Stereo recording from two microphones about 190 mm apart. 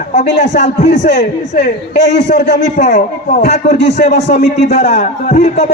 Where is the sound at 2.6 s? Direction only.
40° left (ahead or behind).